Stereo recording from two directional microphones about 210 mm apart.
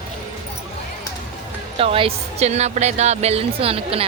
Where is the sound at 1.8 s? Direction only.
25° right (ahead or behind).